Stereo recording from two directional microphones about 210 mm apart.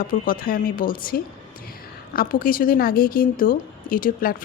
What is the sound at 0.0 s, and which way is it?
A woman's voice, 40° left (ahead or behind).